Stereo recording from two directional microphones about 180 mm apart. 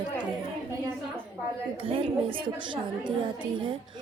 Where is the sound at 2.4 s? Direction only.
25° right (ahead or behind).